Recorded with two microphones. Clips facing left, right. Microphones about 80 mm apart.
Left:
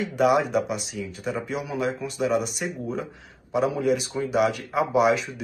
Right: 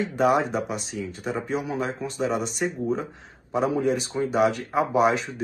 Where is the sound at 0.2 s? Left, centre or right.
Right.